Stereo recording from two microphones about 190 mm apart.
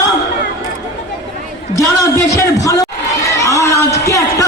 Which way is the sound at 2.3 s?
15° left (ahead or behind).